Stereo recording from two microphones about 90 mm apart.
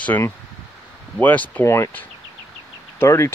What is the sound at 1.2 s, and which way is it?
Speech, 15° left (ahead or behind).